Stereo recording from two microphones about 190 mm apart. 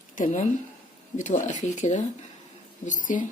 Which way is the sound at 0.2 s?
45° left (ahead or behind).